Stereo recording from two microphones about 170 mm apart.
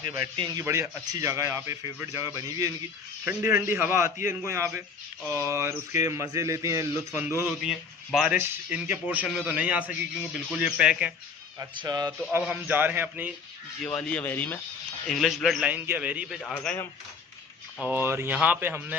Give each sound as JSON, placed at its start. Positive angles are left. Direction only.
{"t": 0.0, "sound": "a man's voice", "side_deg": -25}
{"t": 7.6, "sound": "a man's voice", "side_deg": -5}
{"t": 11.6, "sound": "a man's voice", "side_deg": -25}
{"t": 12.2, "sound": "speech", "side_deg": -10}
{"t": 13.9, "sound": "speech", "side_deg": 10}
{"t": 15.0, "sound": "a man's voice", "side_deg": 0}
{"t": 16.5, "sound": "speech", "side_deg": 15}
{"t": 17.9, "sound": "speech", "side_deg": -15}